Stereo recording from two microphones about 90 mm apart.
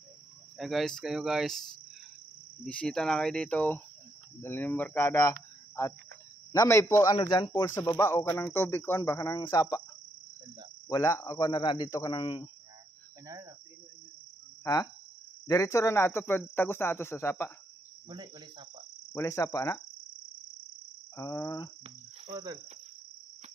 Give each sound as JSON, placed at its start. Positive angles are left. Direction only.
{"t": 0.6, "sound": "speech", "side_deg": 0}
{"t": 2.6, "sound": "cricket", "side_deg": 10}
{"t": 4.4, "sound": "speech", "side_deg": 25}
{"t": 7.2, "sound": "cricket", "side_deg": 50}
{"t": 7.6, "sound": "speech", "side_deg": 35}
{"t": 9.4, "sound": "cricket", "side_deg": 50}
{"t": 10.9, "sound": "speech", "side_deg": 35}
{"t": 11.5, "sound": "speech", "side_deg": 55}
{"t": 14.6, "sound": "cricket", "side_deg": 40}
{"t": 15.4, "sound": "speech", "side_deg": 35}
{"t": 18.0, "sound": "cricket", "side_deg": -55}
{"t": 19.1, "sound": "speech", "side_deg": 35}
{"t": 21.2, "sound": "speech", "side_deg": 35}
{"t": 22.3, "sound": "cricket", "side_deg": -40}